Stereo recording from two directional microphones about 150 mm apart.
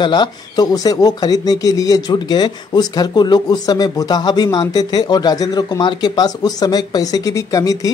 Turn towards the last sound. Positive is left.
turn(degrees=25)  # may be behind; listen again after turning